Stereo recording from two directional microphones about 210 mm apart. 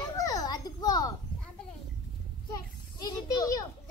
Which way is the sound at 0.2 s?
20° left (ahead or behind).